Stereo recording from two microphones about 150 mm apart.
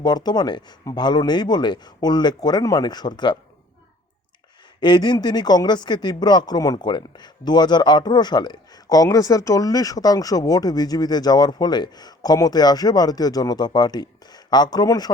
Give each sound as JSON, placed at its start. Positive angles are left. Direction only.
{"t": 0.0, "sound": "speech", "side_deg": 25}
{"t": 4.8, "sound": "speech", "side_deg": 30}